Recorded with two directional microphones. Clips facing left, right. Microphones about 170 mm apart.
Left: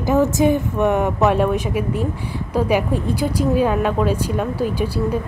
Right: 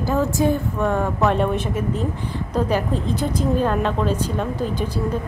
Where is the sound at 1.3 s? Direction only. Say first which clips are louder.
Left 3 dB; 10° left (ahead or behind).